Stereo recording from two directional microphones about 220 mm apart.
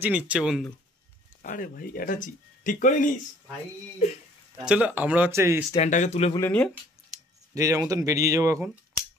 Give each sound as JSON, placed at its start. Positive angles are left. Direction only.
{"t": 0.0, "sound": "speech", "side_deg": -5}
{"t": 1.4, "sound": "speech", "side_deg": 40}
{"t": 4.6, "sound": "speech", "side_deg": -5}
{"t": 5.8, "sound": "speech", "side_deg": 30}
{"t": 6.3, "sound": "speech", "side_deg": 10}
{"t": 7.5, "sound": "speech", "side_deg": -15}